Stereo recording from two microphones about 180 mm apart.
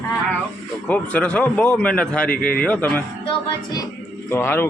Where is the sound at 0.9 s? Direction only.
5° left (ahead or behind).